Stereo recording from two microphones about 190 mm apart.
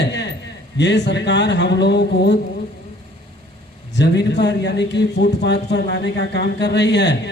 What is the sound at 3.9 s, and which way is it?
A man's voice, 65° left (ahead or behind).